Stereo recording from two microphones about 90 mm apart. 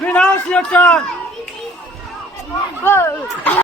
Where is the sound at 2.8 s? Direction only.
25° left (ahead or behind).